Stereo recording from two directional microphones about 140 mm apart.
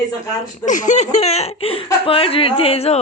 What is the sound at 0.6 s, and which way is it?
Speech, 60° left (ahead or behind).